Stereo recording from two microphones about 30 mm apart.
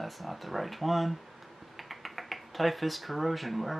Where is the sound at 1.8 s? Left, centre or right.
Centre.